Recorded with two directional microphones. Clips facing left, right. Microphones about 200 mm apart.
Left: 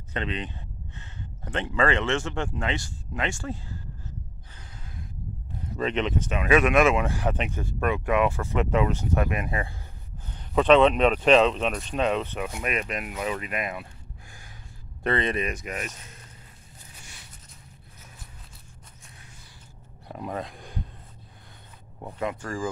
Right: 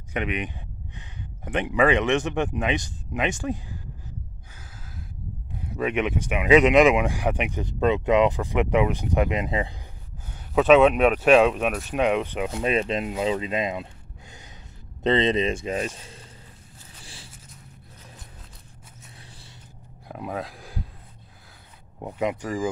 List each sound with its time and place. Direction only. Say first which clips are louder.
0.1 s speech: right 3 dB; 15° right (ahead or behind)
5.8 s speech: right 2 dB; 10° right (ahead or behind)
10.3 s speech: right 2 dB; 5° right (ahead or behind)
12.4 s speech: right 6 dB; 30° right (ahead or behind)
15.0 s speech: right 5 dB; 20° right (ahead or behind)
17.0 s a sound: right 7 dB; 30° right (ahead or behind)
20.1 s speech: right 1 dB; 5° right (ahead or behind)
22.0 s speech: right 4 dB; 20° right (ahead or behind)